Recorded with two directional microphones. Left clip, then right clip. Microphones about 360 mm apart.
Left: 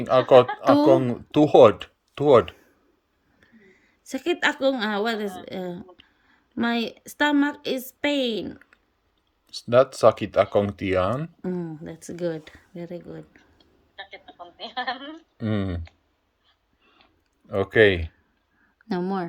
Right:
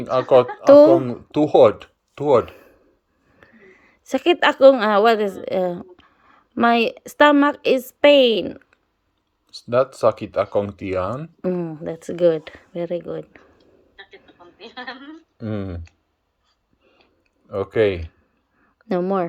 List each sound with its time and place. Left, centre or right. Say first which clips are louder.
0.1 s speech: even; left
3.4 s a sound: right 7 dB; centre
4.1 s a woman's voice: right 7 dB; centre
9.5 s speech: left 1 dB; left
11.9 s speech: right 12 dB; centre
12.9 s speech: right 11 dB; right
13.9 s a sound: left 4 dB; centre
15.4 s speech: even; left
17.5 s speech: left 1 dB; left
18.9 s speech: right 7 dB; centre